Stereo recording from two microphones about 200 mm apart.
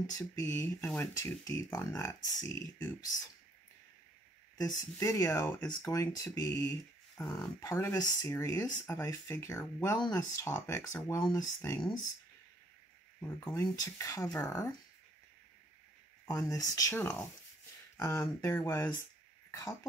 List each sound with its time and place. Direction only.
0.0 s speech: 15° left (ahead or behind)
4.6 s speech: 15° left (ahead or behind)
7.2 s speech: centre (ahead or behind)
7.6 s speech: 15° left (ahead or behind)
13.4 s speech: 15° left (ahead or behind)
16.3 s speech: 15° left (ahead or behind)